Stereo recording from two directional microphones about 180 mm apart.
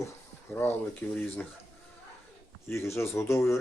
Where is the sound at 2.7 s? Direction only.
15° left (ahead or behind).